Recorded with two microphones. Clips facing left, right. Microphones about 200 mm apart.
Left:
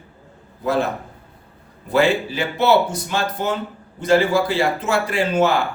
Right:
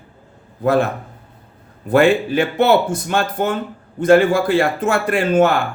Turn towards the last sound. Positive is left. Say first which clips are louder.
# right 3 dB
turn(degrees=-55)  # may be behind; listen again after turning